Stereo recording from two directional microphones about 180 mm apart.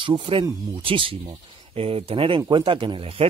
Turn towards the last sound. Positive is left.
turn(degrees=-30)  # may be behind; listen again after turning